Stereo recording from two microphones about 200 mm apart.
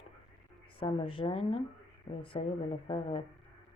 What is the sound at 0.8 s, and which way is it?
Speech, 25° left (ahead or behind).